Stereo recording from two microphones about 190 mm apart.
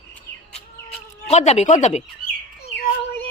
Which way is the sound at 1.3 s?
35° left (ahead or behind).